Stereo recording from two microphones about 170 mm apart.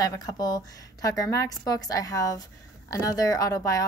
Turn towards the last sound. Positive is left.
turn(degrees=20)  # may be behind; listen again after turning